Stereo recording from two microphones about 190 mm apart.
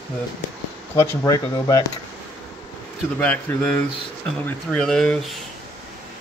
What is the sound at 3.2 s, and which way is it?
Speech, 10° left (ahead or behind).